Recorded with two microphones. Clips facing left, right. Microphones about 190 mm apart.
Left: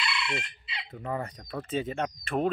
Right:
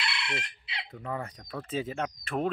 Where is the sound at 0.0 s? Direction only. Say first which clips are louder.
Left 3 dB; 65° right (ahead or behind).